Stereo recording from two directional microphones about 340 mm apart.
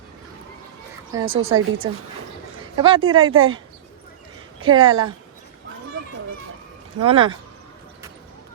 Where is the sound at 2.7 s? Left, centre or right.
Centre.